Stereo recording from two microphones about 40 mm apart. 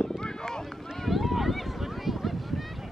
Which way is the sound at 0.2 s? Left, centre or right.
Centre.